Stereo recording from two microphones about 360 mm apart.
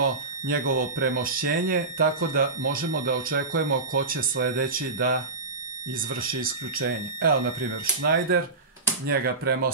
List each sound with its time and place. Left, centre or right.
0.0 s speech: right